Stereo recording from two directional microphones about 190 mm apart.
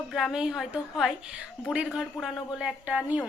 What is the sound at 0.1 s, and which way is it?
A woman's voice, centre (ahead or behind).